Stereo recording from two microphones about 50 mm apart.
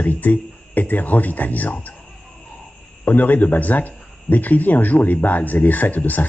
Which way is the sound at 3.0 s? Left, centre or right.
Left.